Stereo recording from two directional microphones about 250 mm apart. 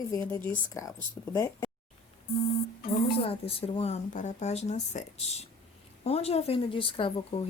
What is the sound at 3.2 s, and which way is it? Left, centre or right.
Speech, left.